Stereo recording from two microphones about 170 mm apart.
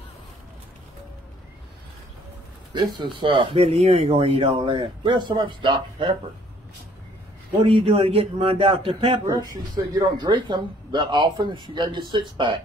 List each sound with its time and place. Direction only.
2.7 s speech: 30° right (ahead or behind)
7.6 s a man's voice: 35° right (ahead or behind)
9.3 s speech: 20° right (ahead or behind)